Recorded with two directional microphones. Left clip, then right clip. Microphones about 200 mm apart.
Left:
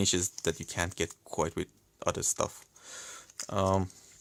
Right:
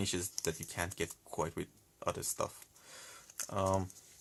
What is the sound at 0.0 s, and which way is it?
Speech, 40° left (ahead or behind).